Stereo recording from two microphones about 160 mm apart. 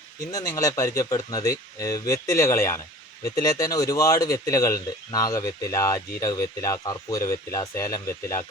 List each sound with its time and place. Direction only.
0.3 s speech: 20° left (ahead or behind)